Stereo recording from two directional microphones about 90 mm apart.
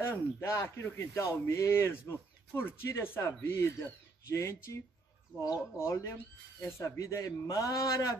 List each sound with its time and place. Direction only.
0.0 s speech: 30° left (ahead or behind)